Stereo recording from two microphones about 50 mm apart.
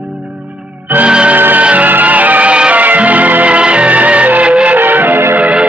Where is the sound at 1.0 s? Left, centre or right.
Right.